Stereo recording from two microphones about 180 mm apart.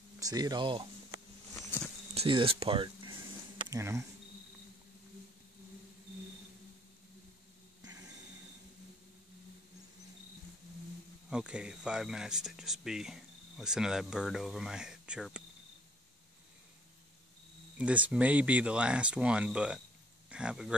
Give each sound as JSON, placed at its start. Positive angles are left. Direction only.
{"t": 0.2, "sound": "speech", "side_deg": -20}
{"t": 2.1, "sound": "speech", "side_deg": -30}
{"t": 3.6, "sound": "speech", "side_deg": -15}
{"t": 11.2, "sound": "speech", "side_deg": -5}
{"t": 17.7, "sound": "speech", "side_deg": -5}